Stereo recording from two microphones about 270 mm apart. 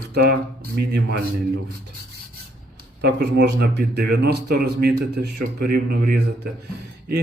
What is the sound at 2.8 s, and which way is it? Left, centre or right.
Speech, right.